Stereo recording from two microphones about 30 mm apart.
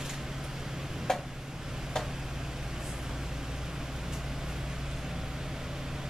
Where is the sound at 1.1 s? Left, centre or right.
Centre.